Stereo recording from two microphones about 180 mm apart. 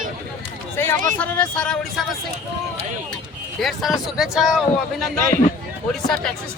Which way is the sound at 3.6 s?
Centre (ahead or behind).